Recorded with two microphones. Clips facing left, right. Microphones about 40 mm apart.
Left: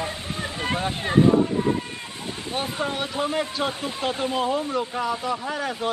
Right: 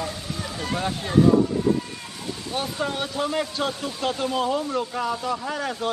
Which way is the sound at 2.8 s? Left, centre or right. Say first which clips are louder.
Even; centre.